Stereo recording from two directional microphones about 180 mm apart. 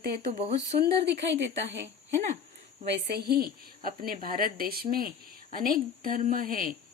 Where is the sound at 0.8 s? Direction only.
75° right (ahead or behind).